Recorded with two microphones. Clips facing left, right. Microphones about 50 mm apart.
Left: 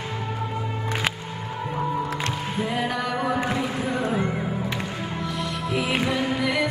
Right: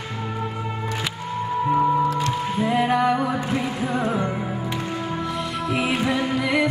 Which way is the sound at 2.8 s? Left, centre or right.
Right.